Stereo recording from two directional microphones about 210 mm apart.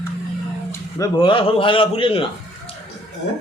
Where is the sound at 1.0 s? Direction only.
25° left (ahead or behind).